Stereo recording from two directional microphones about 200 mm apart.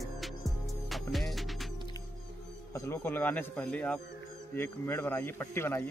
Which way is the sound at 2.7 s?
10° left (ahead or behind).